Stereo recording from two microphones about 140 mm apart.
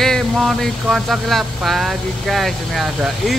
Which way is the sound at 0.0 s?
Centre (ahead or behind).